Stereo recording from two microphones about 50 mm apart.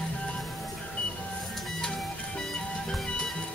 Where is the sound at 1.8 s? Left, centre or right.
Centre.